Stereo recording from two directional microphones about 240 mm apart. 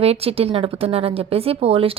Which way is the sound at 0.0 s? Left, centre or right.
Right.